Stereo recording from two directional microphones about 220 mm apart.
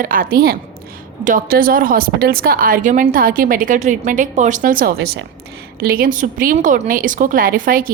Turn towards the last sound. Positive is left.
turn(degrees=-40)  # may be behind; listen again after turning